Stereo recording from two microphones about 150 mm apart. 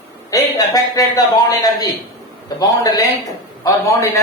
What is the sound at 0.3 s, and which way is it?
Speech, 25° left (ahead or behind).